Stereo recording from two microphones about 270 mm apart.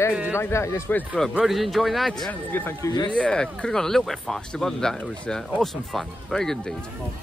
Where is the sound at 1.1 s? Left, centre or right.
Centre.